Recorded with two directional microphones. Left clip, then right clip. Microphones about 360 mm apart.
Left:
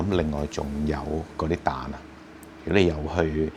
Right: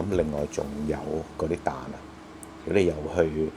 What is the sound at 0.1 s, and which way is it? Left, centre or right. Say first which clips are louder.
Speech: right 1 dB; left.